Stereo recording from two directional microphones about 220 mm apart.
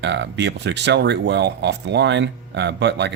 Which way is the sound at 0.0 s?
55° right (ahead or behind).